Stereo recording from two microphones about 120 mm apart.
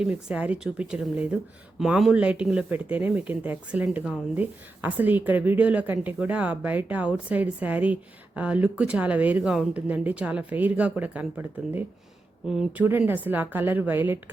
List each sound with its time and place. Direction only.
0.0 s a woman's voice: 10° right (ahead or behind)
12.8 s a woman's voice: 15° right (ahead or behind)